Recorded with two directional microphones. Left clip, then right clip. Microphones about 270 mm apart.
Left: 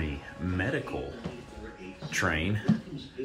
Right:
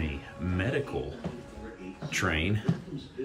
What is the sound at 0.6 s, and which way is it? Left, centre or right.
Speech, centre.